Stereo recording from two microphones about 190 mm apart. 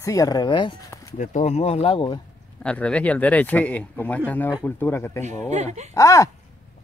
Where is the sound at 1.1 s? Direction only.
35° left (ahead or behind).